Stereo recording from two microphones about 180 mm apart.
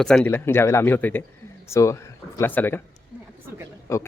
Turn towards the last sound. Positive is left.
turn(degrees=15)  # may be behind; listen again after turning